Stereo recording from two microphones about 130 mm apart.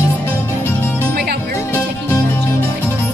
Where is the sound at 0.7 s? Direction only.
15° left (ahead or behind).